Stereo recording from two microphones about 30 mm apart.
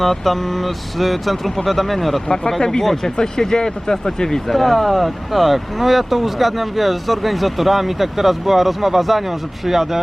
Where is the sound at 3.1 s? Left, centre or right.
Left.